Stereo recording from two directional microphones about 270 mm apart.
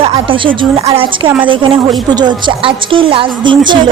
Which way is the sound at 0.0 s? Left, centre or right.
Centre.